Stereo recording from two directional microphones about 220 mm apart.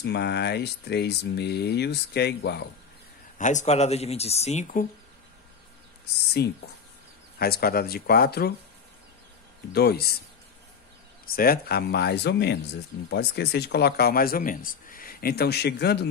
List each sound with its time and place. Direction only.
0.0 s speech: 50° left (ahead or behind)
3.3 s speech: 35° left (ahead or behind)
6.4 s speech: 45° left (ahead or behind)
9.7 s speech: 45° left (ahead or behind)
11.2 s speech: 45° left (ahead or behind)